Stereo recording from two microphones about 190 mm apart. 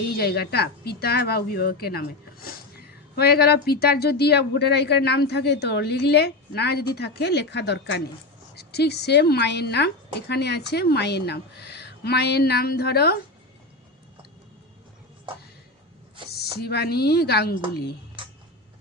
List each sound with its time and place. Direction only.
0.2 s a woman's voice: 55° left (ahead or behind)
16.3 s a woman's voice: 55° left (ahead or behind)
18.2 s a sound: 25° right (ahead or behind)